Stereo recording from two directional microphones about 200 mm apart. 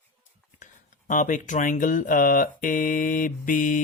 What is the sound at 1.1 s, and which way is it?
Speech, 40° left (ahead or behind).